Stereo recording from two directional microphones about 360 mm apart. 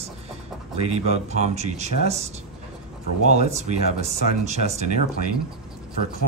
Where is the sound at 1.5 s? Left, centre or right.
Centre.